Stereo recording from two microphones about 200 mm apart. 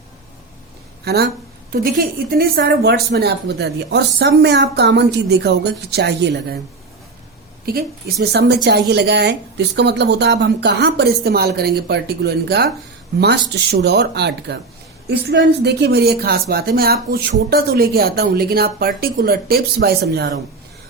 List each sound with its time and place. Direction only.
1.0 s speech: 55° right (ahead or behind)
2.3 s a woman's voice: 50° right (ahead or behind)
7.6 s a woman's voice: 50° right (ahead or behind)